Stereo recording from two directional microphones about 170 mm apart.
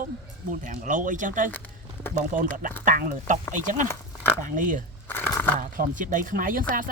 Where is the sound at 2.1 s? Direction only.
50° right (ahead or behind).